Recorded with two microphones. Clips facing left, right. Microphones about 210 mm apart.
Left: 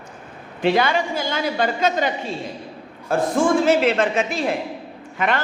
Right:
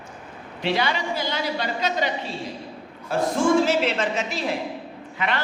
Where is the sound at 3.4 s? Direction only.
55° left (ahead or behind).